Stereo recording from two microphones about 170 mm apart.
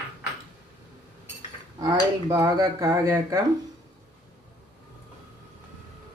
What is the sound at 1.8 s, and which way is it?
Speech, 20° right (ahead or behind).